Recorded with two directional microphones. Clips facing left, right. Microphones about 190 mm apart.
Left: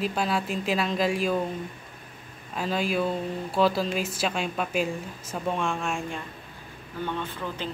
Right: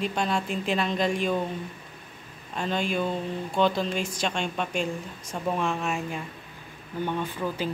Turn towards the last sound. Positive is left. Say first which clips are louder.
# right 3 dB
turn(degrees=-10)  # may be behind; listen again after turning